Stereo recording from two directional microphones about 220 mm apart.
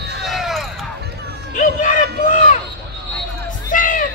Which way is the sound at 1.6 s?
35° left (ahead or behind).